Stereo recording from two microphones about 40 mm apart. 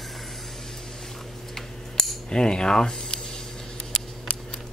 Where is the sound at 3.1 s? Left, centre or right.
Centre.